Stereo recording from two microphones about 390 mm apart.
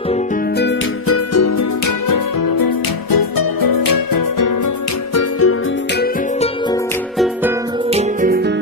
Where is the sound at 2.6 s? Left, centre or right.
Left.